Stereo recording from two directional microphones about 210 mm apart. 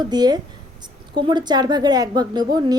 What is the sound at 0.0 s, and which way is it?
A woman's voice, 20° right (ahead or behind).